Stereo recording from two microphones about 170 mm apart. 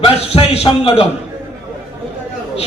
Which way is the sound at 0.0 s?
35° left (ahead or behind).